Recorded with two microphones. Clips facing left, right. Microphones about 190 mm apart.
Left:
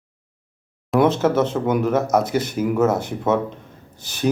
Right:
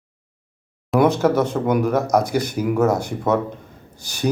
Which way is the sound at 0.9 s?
Centre (ahead or behind).